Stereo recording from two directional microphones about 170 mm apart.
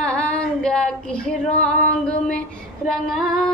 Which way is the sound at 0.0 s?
5° left (ahead or behind).